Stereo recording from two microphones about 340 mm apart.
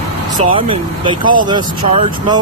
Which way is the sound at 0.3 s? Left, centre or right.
Centre.